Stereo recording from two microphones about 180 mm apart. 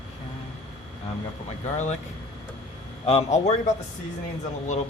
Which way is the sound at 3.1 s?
35° left (ahead or behind).